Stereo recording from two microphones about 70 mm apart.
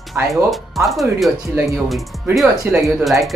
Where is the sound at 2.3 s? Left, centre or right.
Centre.